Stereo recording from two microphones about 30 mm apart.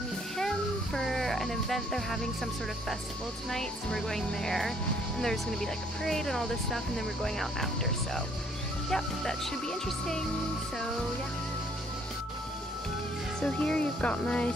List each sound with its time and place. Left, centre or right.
0.9 s speech: centre
13.4 s speech: left